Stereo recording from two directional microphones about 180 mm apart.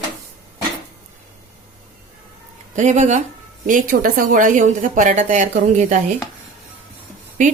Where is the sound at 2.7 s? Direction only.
40° right (ahead or behind).